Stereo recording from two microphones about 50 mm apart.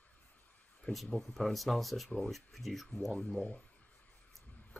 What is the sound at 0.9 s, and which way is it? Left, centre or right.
Speech, left.